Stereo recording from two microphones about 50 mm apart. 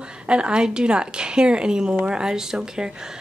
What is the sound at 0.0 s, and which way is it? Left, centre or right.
A woman's voice, centre.